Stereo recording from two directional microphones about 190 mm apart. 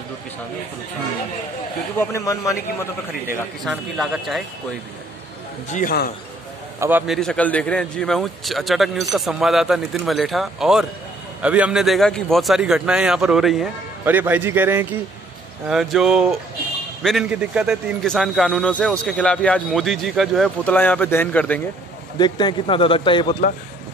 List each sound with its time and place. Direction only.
2.0 s a man's voice: 15° left (ahead or behind)
3.6 s a man's voice: 5° right (ahead or behind)
5.7 s a man's voice: 45° left (ahead or behind)
6.8 s a man's voice: 10° right (ahead or behind)
7.2 s a man's voice: 5° left (ahead or behind)
22.2 s speech: 25° left (ahead or behind)